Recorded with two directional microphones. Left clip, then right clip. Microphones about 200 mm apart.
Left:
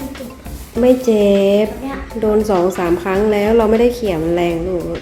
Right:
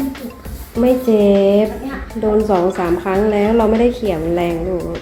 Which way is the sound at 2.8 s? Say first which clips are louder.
Even; 30° left (ahead or behind).